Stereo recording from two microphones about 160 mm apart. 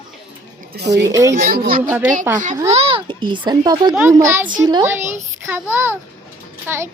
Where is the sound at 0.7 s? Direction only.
90° right.